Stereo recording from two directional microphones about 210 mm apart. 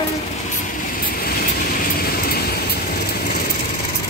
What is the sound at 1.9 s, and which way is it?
Vehicle, 45° left (ahead or behind).